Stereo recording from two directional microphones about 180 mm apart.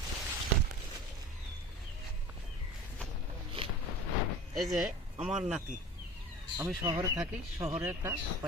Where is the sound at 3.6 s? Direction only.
30° right (ahead or behind).